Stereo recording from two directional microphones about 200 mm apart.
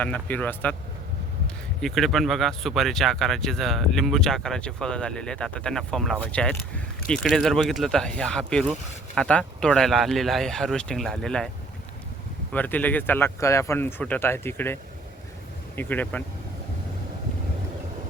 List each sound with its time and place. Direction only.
0.0 s speech: 5° left (ahead or behind)
1.8 s speech: centre (ahead or behind)
12.5 s speech: 10° left (ahead or behind)